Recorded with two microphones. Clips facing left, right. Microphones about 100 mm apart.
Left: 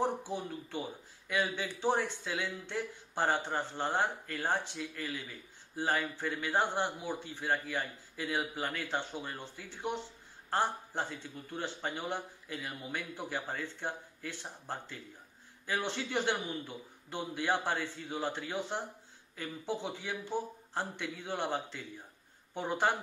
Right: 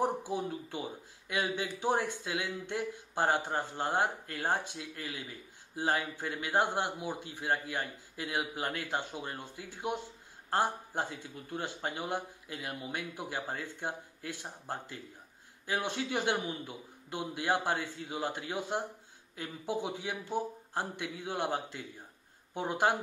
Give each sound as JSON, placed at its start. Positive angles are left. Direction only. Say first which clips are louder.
{"t": 0.0, "sound": "speech", "louder": "right 2 dB", "side_deg": -15}